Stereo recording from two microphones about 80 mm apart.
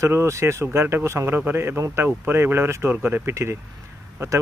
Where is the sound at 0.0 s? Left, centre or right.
Right.